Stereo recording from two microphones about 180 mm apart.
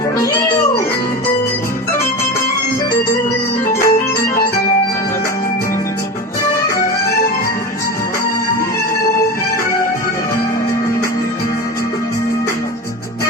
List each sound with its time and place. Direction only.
3.7 s organ: 15° left (ahead or behind)